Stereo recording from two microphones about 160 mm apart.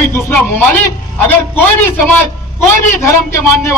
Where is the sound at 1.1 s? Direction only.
10° left (ahead or behind).